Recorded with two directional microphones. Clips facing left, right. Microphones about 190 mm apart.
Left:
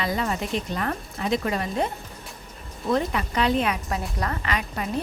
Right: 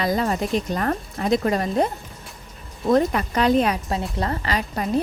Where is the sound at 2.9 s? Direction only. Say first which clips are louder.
Right 5 dB; 45° right (ahead or behind).